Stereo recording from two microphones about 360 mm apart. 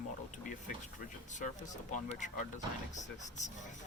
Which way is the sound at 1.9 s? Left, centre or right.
Centre.